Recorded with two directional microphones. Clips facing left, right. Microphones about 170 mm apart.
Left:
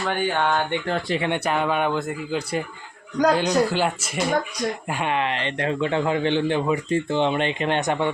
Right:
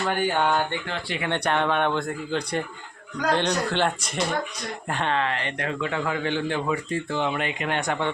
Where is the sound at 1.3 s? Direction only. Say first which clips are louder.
Right 2 dB; 5° left (ahead or behind).